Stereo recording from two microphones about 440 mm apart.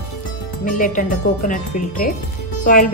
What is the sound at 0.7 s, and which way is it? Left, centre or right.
A woman's voice, centre.